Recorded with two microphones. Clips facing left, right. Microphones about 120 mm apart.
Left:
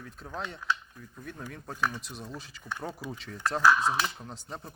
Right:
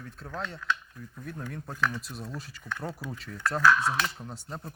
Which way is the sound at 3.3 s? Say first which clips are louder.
Even; 20° left (ahead or behind).